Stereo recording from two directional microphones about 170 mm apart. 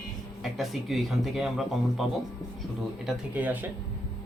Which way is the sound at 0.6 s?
Centre (ahead or behind).